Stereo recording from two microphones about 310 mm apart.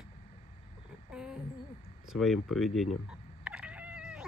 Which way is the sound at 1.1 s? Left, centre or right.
Centre.